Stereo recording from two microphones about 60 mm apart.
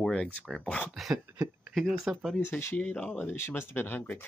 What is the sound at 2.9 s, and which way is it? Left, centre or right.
Speech, centre.